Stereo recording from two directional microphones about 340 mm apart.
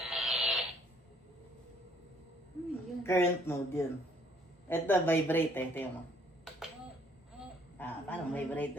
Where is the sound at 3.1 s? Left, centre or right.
Centre.